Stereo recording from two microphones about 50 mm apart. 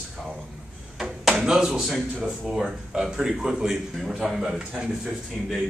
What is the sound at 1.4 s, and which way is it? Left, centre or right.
A man's voice, centre.